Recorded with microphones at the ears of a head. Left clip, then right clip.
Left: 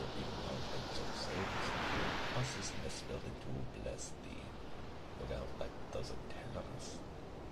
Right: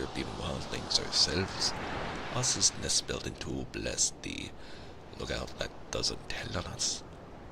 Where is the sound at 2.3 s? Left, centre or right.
Right.